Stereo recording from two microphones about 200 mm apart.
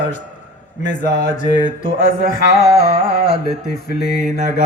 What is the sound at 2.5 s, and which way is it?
Carnatic music, 50° left (ahead or behind).